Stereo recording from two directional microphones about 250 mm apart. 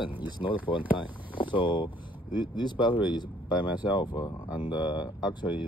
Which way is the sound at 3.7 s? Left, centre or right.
Centre.